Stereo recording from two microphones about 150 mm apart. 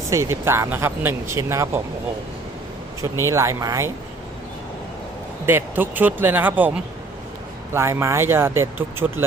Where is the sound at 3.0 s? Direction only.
20° right (ahead or behind).